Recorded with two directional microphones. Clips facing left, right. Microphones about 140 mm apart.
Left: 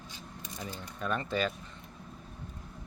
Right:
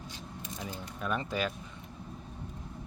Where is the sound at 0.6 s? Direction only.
5° right (ahead or behind).